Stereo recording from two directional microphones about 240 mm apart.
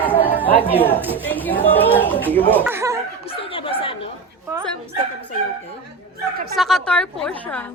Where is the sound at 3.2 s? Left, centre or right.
Left.